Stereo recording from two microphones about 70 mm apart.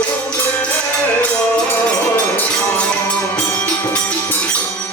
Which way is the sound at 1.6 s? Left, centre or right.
Left.